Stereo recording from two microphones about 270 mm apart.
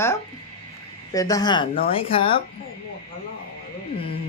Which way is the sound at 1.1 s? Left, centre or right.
Centre.